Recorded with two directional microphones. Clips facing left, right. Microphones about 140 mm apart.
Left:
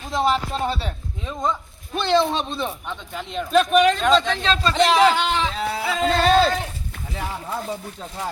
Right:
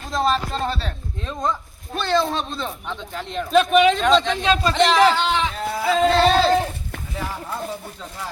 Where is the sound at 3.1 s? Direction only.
5° left (ahead or behind).